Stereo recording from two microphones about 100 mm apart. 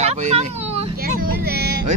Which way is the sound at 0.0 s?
90° right.